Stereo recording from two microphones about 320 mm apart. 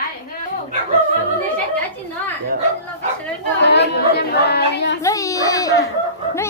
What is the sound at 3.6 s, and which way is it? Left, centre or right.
Speech, left.